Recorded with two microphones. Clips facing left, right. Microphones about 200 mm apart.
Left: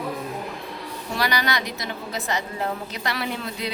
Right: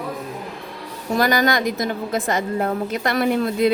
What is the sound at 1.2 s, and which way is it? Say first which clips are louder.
A woman's voice: right 7 dB; 50° right (ahead or behind).